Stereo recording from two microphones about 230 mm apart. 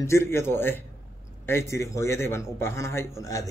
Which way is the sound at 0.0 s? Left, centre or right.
Centre.